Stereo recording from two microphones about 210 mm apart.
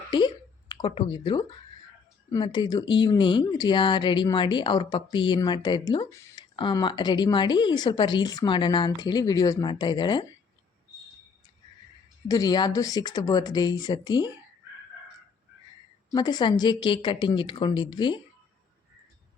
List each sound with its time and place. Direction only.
0.1 s speech: 20° left (ahead or behind)
12.3 s speech: 20° left (ahead or behind)
16.1 s speech: 20° left (ahead or behind)